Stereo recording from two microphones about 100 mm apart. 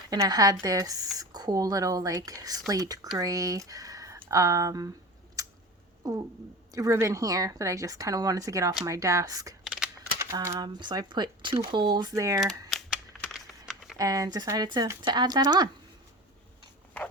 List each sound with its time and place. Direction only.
0.3 s speech: 40° right (ahead or behind)
5.4 s a sound: 35° right (ahead or behind)
6.7 s speech: 30° right (ahead or behind)
9.6 s a sound: 5° right (ahead or behind)
10.3 s speech: 35° right (ahead or behind)
10.8 s speech: 50° right (ahead or behind)
12.1 s speech: 30° right (ahead or behind)
12.4 s speech: 5° left (ahead or behind)
13.3 s typing: centre (ahead or behind)
14.0 s speech: 35° right (ahead or behind)